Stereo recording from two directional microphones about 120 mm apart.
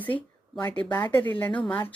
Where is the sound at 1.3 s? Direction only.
15° left (ahead or behind).